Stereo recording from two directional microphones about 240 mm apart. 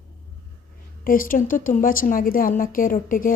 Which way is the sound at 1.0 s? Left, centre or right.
Left.